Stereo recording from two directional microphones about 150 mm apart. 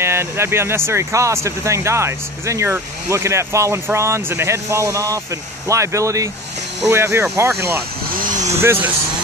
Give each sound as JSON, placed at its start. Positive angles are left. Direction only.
{"t": 0.0, "sound": "speech", "side_deg": -15}
{"t": 8.1, "sound": "vehicle", "side_deg": -65}
{"t": 8.5, "sound": "speech", "side_deg": -15}